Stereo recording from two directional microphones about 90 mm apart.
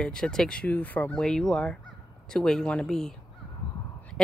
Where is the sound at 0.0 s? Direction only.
5° left (ahead or behind).